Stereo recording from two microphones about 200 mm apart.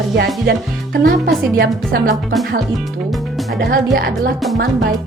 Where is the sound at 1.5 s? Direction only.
50° right (ahead or behind).